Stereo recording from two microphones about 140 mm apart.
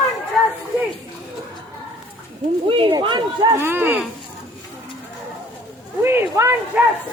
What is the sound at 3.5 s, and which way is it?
Speech, 15° right (ahead or behind).